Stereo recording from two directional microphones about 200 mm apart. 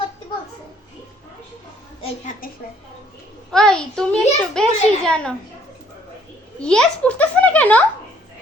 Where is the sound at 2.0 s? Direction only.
40° left (ahead or behind).